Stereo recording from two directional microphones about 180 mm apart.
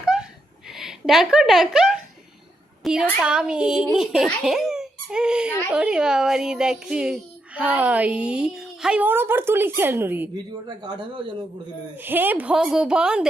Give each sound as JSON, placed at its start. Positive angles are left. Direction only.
{"t": 0.0, "sound": "a sound", "side_deg": -5}
{"t": 0.7, "sound": "a woman's voice", "side_deg": 0}
{"t": 10.3, "sound": "speech", "side_deg": -25}
{"t": 11.9, "sound": "a woman's voice", "side_deg": -10}